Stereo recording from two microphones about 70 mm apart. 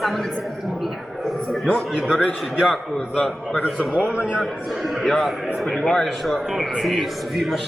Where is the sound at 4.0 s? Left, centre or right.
Centre.